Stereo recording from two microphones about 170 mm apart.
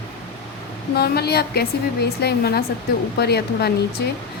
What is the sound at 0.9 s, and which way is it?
A woman's voice, 70° left (ahead or behind).